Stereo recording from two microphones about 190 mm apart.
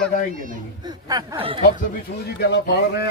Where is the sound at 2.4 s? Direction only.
60° left (ahead or behind).